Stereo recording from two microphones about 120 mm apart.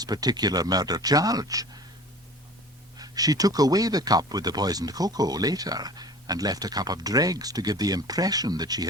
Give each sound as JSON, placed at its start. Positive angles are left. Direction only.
{"t": 0.0, "sound": "speech", "side_deg": -35}
{"t": 3.0, "sound": "speech", "side_deg": -30}